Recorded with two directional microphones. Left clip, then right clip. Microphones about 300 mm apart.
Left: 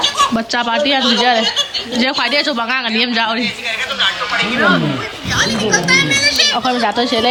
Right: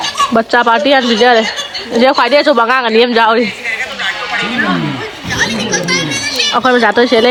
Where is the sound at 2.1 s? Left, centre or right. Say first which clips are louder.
Right 7 dB; right.